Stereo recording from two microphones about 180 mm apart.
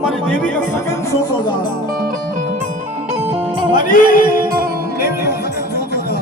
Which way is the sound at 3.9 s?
50° left (ahead or behind).